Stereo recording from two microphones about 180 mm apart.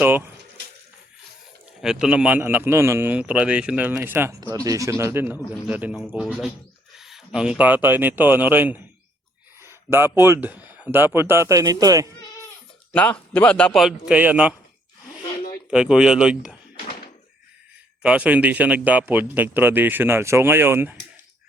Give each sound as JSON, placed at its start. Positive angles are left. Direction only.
{"t": 1.8, "sound": "speech", "side_deg": -5}
{"t": 12.9, "sound": "a man's voice", "side_deg": 10}
{"t": 15.7, "sound": "a man's voice", "side_deg": -5}
{"t": 18.0, "sound": "speech", "side_deg": -5}